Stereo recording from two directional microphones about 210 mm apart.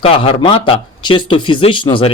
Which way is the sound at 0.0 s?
25° left (ahead or behind).